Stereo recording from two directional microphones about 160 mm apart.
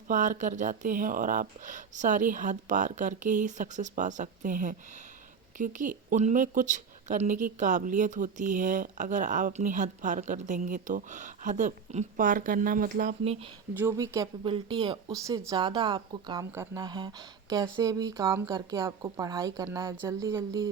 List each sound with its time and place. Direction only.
0.1 s a woman's voice: 50° right (ahead or behind)
13.7 s speech: 15° right (ahead or behind)
14.4 s speech: 30° right (ahead or behind)